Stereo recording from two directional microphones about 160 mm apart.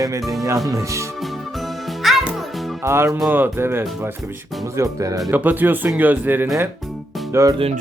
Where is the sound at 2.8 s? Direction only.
15° right (ahead or behind).